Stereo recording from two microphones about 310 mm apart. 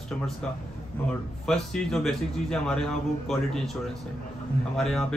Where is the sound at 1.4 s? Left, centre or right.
Centre.